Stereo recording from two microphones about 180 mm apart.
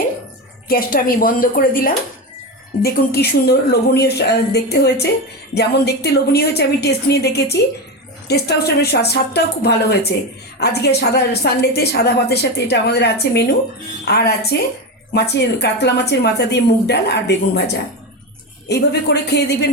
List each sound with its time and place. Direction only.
0.7 s a woman's voice: 55° left (ahead or behind)
18.7 s a woman's voice: 70° left (ahead or behind)